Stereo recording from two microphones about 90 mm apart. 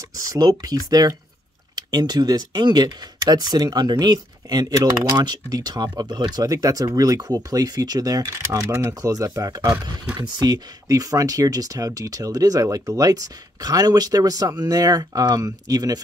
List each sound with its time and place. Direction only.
0.3 s speech: 45° right (ahead or behind)
4.9 s speech: 35° right (ahead or behind)
5.2 s speech: 50° right (ahead or behind)